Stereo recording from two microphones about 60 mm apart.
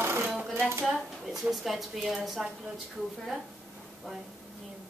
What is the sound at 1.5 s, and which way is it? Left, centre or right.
Speech, centre.